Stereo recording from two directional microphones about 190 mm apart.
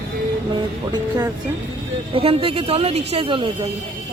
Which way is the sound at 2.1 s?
30° right (ahead or behind).